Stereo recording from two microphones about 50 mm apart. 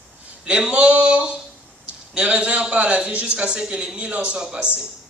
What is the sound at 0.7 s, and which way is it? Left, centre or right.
A man's voice, right.